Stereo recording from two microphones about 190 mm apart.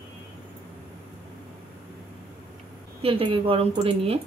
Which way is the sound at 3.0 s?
30° right (ahead or behind).